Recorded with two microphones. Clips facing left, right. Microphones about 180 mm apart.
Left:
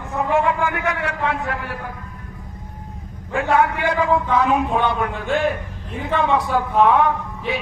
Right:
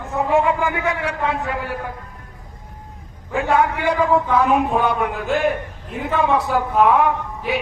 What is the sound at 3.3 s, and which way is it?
Speech, 15° right (ahead or behind).